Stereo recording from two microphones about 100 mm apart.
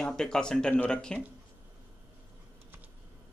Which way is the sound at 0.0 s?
5° left (ahead or behind).